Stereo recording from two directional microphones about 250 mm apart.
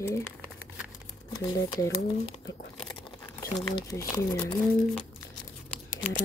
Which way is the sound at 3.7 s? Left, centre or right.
Centre.